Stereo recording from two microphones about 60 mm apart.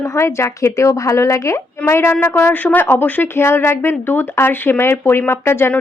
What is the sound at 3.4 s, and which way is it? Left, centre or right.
A woman's voice, left.